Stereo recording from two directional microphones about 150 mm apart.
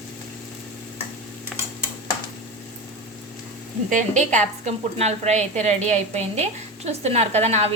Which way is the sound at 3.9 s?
55° right (ahead or behind).